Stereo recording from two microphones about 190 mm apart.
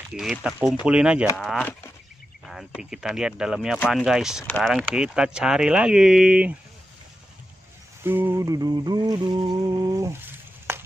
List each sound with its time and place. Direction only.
0.1 s speech: centre (ahead or behind)
2.4 s speech: 5° right (ahead or behind)
8.0 s a sound: 10° right (ahead or behind)